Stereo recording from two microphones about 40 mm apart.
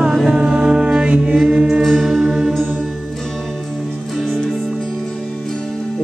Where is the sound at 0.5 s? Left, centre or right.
Centre.